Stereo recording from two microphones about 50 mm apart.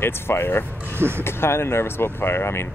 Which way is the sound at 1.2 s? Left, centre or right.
Left.